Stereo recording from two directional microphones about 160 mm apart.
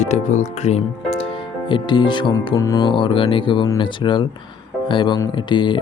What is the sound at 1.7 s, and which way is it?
Speech, 30° left (ahead or behind).